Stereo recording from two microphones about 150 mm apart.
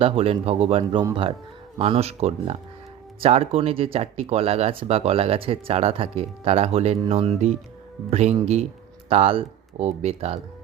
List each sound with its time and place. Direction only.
0.0 s speech: 40° right (ahead or behind)
0.8 s speech: 30° right (ahead or behind)